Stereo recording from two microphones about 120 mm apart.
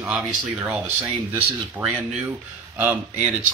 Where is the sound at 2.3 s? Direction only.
15° right (ahead or behind).